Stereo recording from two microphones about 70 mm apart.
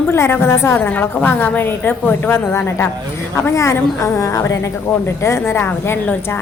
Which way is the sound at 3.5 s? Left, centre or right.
Left.